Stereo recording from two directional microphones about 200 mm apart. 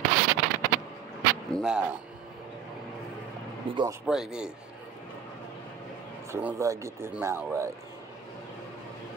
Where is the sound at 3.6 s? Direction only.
25° right (ahead or behind).